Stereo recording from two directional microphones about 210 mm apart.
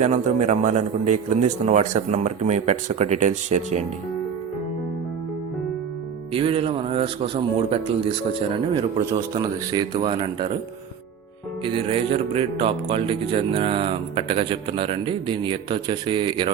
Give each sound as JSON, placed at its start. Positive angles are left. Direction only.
{"t": 0.0, "sound": "a man's voice", "side_deg": -35}
{"t": 6.3, "sound": "speech", "side_deg": -25}
{"t": 11.6, "sound": "speech", "side_deg": -25}